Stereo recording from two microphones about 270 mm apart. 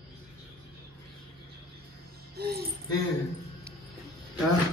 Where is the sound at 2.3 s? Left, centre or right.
Right.